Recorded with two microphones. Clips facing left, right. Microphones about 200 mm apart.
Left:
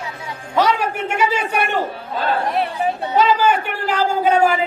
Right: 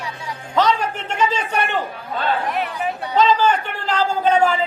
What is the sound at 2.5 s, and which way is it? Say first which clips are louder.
Speech: left 3 dB; 35° left (ahead or behind).